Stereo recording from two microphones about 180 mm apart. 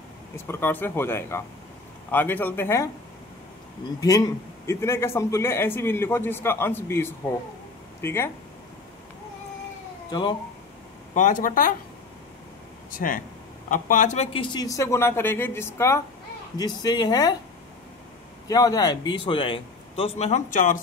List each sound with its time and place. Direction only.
0.5 s a man's voice: 10° left (ahead or behind)
4.0 s a man's voice: 20° left (ahead or behind)
11.1 s speech: 45° left (ahead or behind)
12.9 s a man's voice: 50° left (ahead or behind); by 17.4 s 20° left (ahead or behind)
18.5 s a man's voice: 20° left (ahead or behind); by 20.8 s 45° left (ahead or behind)